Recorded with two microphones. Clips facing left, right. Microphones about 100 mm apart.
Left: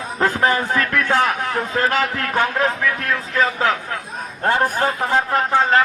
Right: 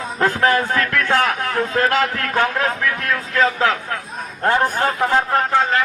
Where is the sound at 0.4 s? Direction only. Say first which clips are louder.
Right 2 dB; 20° left (ahead or behind).